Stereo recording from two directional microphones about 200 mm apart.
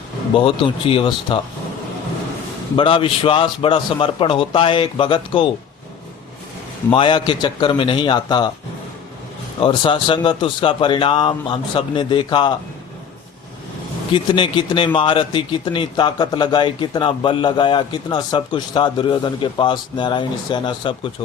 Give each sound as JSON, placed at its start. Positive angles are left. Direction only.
{"t": 0.3, "sound": "a man's voice", "side_deg": 25}
{"t": 2.7, "sound": "a man's voice", "side_deg": 25}
{"t": 6.9, "sound": "a man's voice", "side_deg": 25}
{"t": 9.6, "sound": "a man's voice", "side_deg": 25}
{"t": 14.1, "sound": "a man's voice", "side_deg": 25}